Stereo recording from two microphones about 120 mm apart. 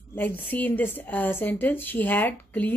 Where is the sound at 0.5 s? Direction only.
15° left (ahead or behind).